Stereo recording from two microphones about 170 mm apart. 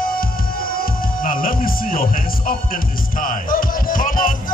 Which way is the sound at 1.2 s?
55° left (ahead or behind).